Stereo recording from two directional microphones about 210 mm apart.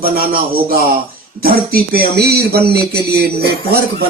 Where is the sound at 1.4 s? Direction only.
45° right (ahead or behind).